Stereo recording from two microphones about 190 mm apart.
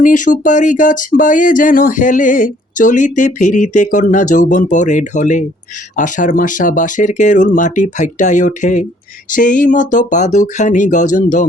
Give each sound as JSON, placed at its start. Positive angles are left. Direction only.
{"t": 0.0, "sound": "speech", "side_deg": 45}